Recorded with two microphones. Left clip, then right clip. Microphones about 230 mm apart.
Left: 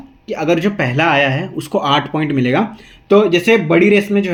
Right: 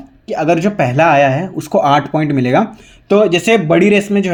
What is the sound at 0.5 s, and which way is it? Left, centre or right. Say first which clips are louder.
Speech: right 2 dB; right.